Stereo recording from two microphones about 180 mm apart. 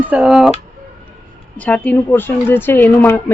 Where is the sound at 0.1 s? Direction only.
5° right (ahead or behind).